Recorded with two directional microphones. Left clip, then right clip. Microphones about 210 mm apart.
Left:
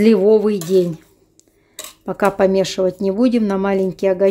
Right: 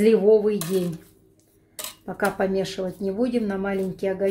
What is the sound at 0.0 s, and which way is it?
Speech, 55° left (ahead or behind).